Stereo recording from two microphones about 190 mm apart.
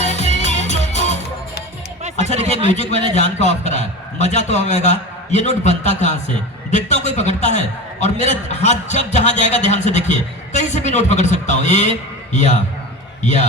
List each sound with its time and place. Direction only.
0.0 s music: 35° left (ahead or behind)
2.0 s a sound: 35° right (ahead or behind)
3.2 s a man's voice: 35° left (ahead or behind)